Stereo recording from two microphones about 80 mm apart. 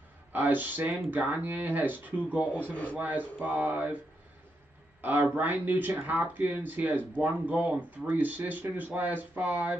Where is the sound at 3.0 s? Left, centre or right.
Right.